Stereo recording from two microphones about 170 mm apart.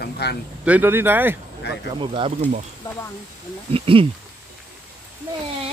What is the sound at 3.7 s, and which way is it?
Speech, 30° right (ahead or behind).